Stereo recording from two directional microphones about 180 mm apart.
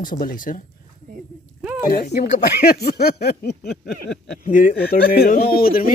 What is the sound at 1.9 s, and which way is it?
Speech, 55° left (ahead or behind).